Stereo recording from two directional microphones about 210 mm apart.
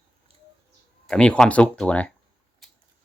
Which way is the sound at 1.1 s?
5° left (ahead or behind).